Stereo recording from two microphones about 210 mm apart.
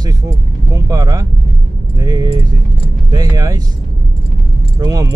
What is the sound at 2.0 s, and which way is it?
Speech, 20° right (ahead or behind).